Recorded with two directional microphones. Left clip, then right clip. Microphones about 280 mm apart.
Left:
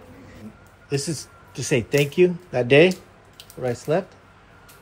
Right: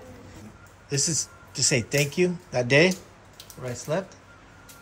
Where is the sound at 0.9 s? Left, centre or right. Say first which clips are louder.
Even; centre.